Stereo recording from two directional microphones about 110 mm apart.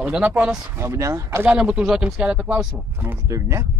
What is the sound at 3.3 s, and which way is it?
Speech, 30° right (ahead or behind).